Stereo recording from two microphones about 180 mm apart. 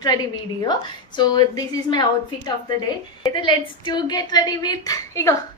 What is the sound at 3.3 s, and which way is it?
Speech, 25° left (ahead or behind).